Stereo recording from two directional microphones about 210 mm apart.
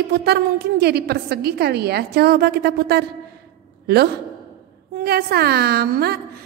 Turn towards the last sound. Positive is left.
turn(degrees=-50)  # may be behind; listen again after turning